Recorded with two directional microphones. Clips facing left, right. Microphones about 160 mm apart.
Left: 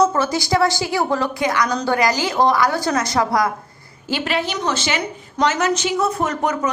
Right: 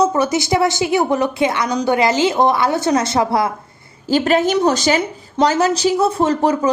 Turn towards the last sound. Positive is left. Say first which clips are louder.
# right 5 dB
turn(degrees=-30)  # may be behind; listen again after turning